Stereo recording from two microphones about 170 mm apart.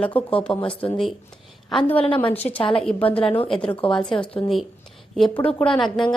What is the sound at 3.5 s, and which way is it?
Speech, 5° left (ahead or behind).